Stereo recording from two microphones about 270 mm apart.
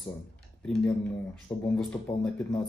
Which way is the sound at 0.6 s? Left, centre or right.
Centre.